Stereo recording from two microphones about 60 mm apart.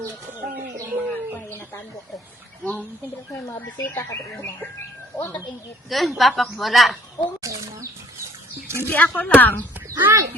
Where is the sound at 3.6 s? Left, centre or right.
Left.